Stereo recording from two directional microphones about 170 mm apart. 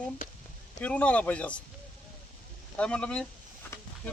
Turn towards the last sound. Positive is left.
turn(degrees=5)  # may be behind; listen again after turning